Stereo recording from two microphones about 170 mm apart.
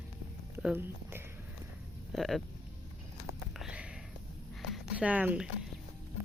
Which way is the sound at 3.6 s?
5° right (ahead or behind).